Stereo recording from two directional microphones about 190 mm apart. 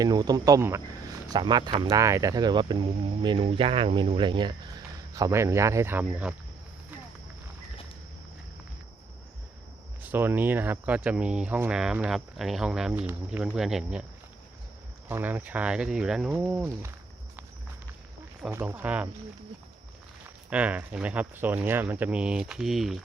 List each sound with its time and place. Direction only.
0.0 s speech: 20° right (ahead or behind)
10.0 s speech: 10° right (ahead or behind)
15.1 s speech: 10° right (ahead or behind)
18.5 s speech: 10° right (ahead or behind)
20.5 s speech: 5° right (ahead or behind)